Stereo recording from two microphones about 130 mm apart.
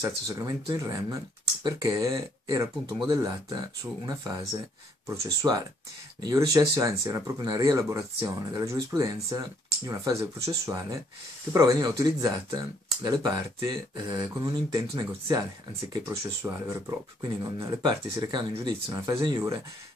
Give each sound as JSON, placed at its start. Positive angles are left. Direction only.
{"t": 0.0, "sound": "speech", "side_deg": -25}